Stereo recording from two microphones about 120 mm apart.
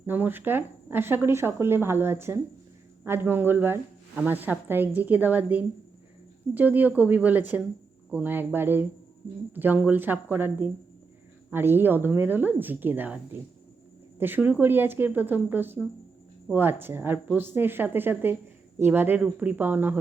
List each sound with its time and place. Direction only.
0.0 s speech: 15° right (ahead or behind)
14.2 s speech: 15° right (ahead or behind)